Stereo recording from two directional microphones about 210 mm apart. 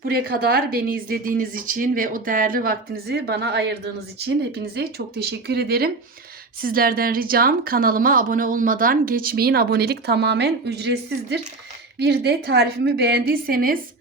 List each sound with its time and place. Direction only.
0.0 s a woman's voice: 45° right (ahead or behind)